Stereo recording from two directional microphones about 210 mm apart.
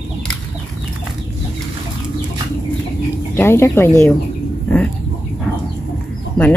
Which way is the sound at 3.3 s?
10° left (ahead or behind).